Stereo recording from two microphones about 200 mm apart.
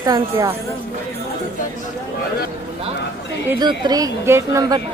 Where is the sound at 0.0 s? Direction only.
15° right (ahead or behind).